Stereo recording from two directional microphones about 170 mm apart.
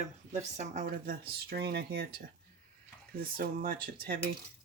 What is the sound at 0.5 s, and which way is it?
Speech, 45° right (ahead or behind).